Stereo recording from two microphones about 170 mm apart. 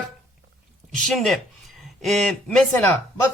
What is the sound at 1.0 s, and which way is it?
A man's voice, centre (ahead or behind).